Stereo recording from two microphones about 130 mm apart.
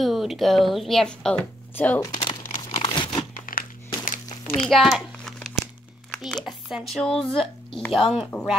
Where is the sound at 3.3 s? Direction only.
90° left.